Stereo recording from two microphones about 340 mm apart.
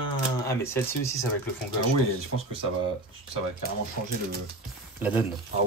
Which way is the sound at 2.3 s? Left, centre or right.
Centre.